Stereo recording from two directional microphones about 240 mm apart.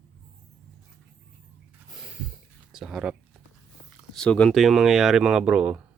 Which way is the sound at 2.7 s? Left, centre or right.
Centre.